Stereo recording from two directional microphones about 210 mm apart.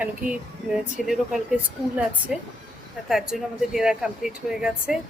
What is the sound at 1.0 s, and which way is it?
Speech, centre (ahead or behind).